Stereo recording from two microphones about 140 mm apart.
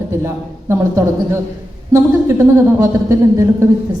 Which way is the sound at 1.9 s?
20° right (ahead or behind).